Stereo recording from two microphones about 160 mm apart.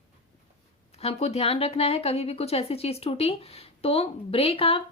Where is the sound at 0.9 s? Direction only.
40° left (ahead or behind).